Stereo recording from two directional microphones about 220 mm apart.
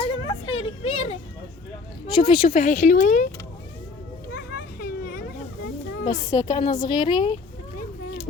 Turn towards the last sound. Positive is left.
turn(degrees=20)  # may be behind; listen again after turning